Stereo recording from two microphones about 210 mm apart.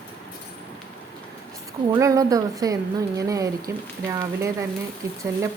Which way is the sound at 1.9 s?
15° right (ahead or behind).